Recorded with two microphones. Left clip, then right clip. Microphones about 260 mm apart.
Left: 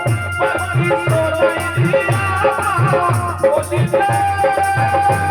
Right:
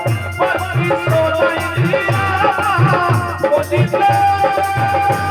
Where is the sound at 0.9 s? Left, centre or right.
Right.